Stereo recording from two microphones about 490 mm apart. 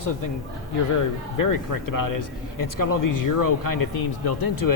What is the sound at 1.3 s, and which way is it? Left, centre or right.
Speech, left.